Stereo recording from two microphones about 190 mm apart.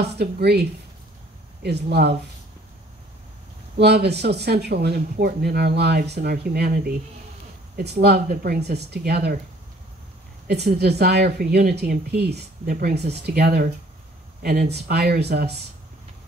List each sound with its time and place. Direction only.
0.0 s speech: 60° right (ahead or behind)
3.7 s speech: 60° right (ahead or behind)
10.5 s speech: 60° right (ahead or behind)